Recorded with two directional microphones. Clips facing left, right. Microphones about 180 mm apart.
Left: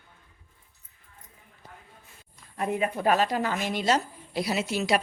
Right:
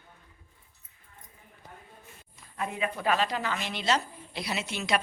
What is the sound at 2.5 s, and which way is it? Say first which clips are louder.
A woman's voice: left 5 dB; 40° left (ahead or behind).